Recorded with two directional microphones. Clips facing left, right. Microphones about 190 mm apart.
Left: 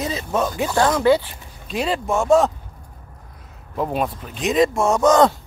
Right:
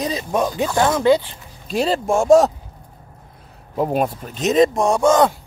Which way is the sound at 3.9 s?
45° right (ahead or behind).